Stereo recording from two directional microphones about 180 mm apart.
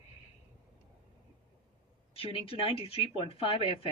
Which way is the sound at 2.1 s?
30° left (ahead or behind).